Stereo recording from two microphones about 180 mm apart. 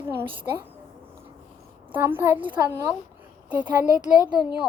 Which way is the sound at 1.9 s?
10° right (ahead or behind).